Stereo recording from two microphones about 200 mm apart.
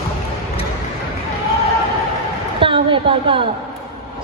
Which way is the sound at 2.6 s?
25° right (ahead or behind).